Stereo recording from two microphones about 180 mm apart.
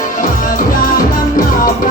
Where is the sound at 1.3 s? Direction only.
50° left (ahead or behind).